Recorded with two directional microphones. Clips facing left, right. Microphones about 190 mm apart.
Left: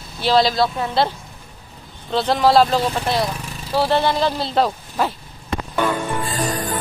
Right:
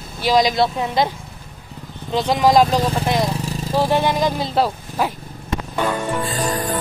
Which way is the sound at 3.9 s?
15° right (ahead or behind).